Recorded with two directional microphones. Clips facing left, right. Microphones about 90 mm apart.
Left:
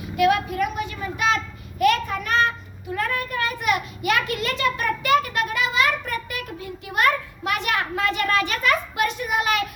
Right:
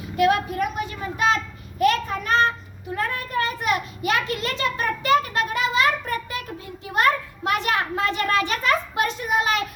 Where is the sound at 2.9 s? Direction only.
30° right (ahead or behind).